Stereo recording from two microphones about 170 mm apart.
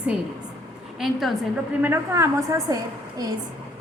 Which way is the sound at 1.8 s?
15° right (ahead or behind).